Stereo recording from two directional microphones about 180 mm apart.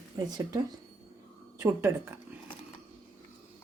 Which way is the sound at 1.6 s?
15° right (ahead or behind).